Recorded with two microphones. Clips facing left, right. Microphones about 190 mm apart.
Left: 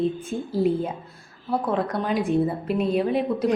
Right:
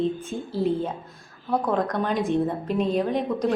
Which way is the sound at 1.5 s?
5° left (ahead or behind).